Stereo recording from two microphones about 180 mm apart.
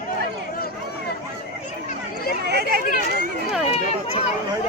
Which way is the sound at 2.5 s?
65° right (ahead or behind).